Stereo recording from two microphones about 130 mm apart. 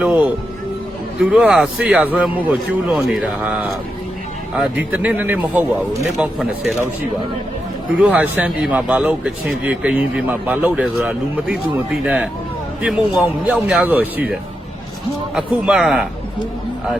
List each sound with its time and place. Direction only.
0.0 s a man's voice: 10° right (ahead or behind)
4.9 s a man's voice: 15° right (ahead or behind)
6.0 s a man's voice: centre (ahead or behind)
7.9 s a man's voice: 10° right (ahead or behind)
13.4 s a man's voice: 10° right (ahead or behind)
15.4 s a man's voice: 5° right (ahead or behind)